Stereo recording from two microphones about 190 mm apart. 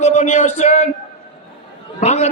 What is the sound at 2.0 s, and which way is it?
Speech, 35° left (ahead or behind).